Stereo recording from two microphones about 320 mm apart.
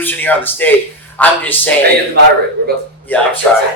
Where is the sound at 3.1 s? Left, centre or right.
Centre.